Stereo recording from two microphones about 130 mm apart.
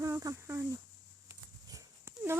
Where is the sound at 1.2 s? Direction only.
25° right (ahead or behind).